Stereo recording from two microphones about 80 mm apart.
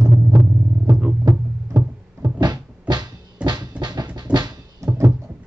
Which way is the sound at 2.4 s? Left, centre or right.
Right.